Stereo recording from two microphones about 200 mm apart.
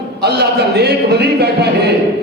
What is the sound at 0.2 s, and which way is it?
A man's voice, 55° right (ahead or behind).